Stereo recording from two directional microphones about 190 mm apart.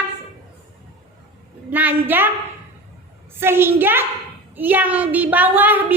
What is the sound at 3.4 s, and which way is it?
A woman's voice, 10° right (ahead or behind).